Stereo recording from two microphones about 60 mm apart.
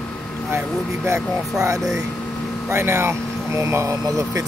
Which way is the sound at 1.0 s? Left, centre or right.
Right.